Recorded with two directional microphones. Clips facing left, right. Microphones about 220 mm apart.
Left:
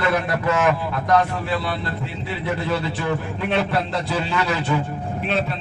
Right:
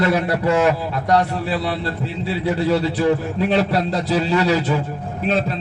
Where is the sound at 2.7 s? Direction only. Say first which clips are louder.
Right 8 dB; 35° right (ahead or behind).